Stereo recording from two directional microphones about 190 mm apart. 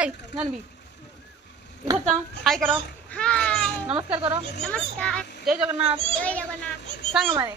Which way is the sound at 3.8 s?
30° right (ahead or behind).